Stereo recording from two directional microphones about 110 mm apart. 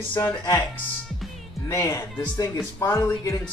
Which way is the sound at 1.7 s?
25° left (ahead or behind).